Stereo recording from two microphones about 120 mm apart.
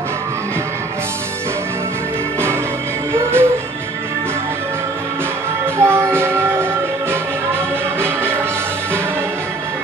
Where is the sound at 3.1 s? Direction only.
20° right (ahead or behind).